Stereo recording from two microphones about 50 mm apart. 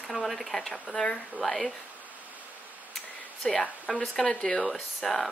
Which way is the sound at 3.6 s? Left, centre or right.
Left.